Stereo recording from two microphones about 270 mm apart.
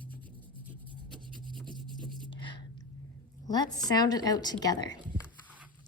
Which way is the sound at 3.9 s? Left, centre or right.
Centre.